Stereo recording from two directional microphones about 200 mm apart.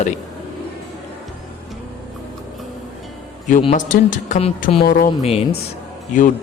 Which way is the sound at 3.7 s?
40° left (ahead or behind).